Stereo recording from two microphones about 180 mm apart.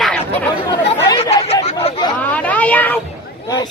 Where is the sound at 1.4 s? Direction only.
35° left (ahead or behind).